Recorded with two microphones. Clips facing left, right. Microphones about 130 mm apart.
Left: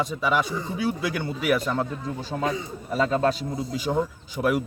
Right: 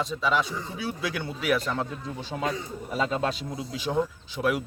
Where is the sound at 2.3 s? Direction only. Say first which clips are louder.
Left 2 dB; centre (ahead or behind).